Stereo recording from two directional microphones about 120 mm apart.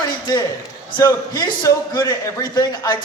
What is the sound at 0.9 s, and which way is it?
A man's voice, 30° left (ahead or behind).